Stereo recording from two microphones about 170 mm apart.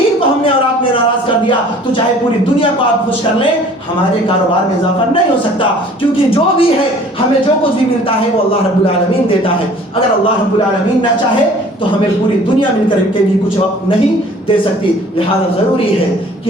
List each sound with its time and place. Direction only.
6.0 s speech: 35° left (ahead or behind)